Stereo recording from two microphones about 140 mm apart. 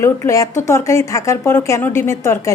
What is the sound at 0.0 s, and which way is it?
A woman's voice, 20° left (ahead or behind).